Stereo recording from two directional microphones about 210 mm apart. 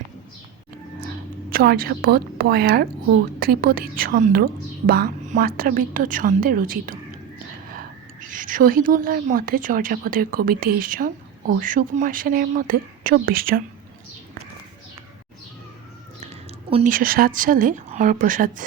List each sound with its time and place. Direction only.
1.0 s a woman's voice: 45° right (ahead or behind)
8.3 s a woman's voice: 40° right (ahead or behind)
16.6 s a woman's voice: 25° right (ahead or behind)
16.9 s a woman's voice: 45° right (ahead or behind)